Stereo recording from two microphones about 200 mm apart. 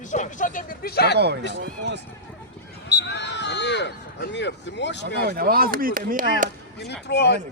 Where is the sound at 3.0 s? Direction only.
60° left (ahead or behind).